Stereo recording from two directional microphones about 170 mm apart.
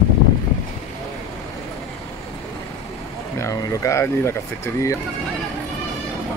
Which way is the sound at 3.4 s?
20° left (ahead or behind).